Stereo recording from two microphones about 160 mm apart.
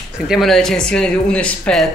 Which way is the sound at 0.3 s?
Centre (ahead or behind).